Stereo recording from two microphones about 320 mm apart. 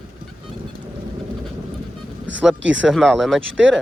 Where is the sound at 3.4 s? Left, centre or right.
Right.